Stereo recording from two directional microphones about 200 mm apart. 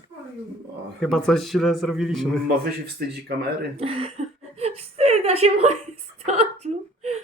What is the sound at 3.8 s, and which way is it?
A woman's voice, 30° right (ahead or behind).